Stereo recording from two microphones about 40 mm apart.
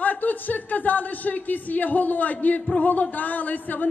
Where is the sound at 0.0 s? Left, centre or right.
Left.